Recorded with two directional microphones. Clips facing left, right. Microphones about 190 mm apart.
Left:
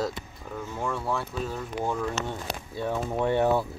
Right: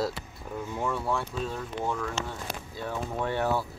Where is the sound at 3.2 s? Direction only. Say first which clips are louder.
Left 5 dB; 20° left (ahead or behind).